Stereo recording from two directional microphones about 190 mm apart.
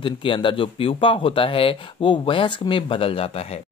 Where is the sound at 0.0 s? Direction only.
25° left (ahead or behind).